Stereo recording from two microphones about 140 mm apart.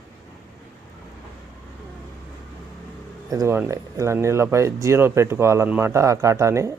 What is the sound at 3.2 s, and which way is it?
Speech, 20° right (ahead or behind).